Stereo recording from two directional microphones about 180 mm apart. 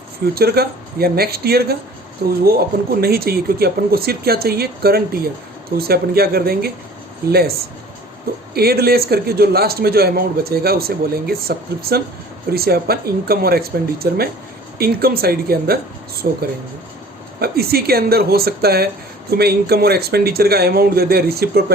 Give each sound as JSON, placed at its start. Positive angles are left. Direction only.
{"t": 0.3, "sound": "a man's voice", "side_deg": -60}
{"t": 8.5, "sound": "a man's voice", "side_deg": -60}